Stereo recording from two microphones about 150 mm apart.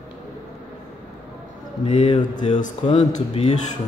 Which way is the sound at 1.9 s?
45° left (ahead or behind).